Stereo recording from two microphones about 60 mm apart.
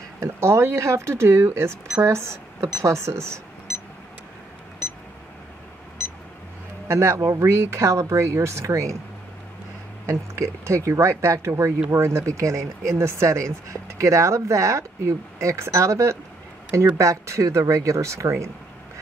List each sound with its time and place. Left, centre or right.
0.2 s speech: right
6.9 s a man's voice: right
10.0 s speech: right
12.3 s speech: right